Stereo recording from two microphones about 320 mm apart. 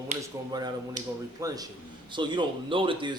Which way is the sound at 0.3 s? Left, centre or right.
Centre.